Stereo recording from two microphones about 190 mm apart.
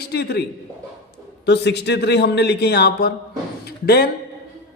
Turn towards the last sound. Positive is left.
turn(degrees=55)  # may be behind; listen again after turning